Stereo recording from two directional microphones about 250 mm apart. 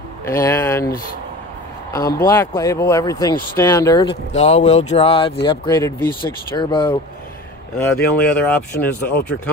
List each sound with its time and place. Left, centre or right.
0.3 s speech: centre
2.1 s speech: centre
4.3 s speech: left; by 9.4 s centre